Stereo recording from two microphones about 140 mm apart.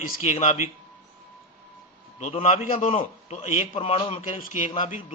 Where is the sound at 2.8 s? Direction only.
40° left (ahead or behind).